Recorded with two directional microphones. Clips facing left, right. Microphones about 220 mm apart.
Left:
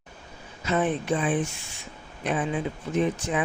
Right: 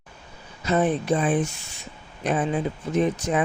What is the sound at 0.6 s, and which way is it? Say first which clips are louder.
Speech: right 3 dB; 40° right (ahead or behind).